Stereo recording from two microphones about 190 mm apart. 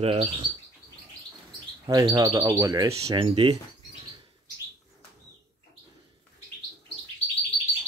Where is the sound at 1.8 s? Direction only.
20° right (ahead or behind).